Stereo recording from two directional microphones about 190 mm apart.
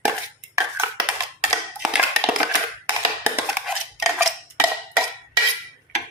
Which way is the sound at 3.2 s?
10° right (ahead or behind).